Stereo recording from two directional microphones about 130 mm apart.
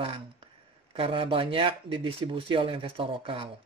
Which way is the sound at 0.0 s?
45° right (ahead or behind).